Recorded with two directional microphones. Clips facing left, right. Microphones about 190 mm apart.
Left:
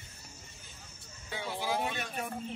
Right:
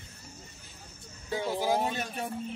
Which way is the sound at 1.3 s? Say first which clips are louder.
Right 6 dB; 40° right (ahead or behind).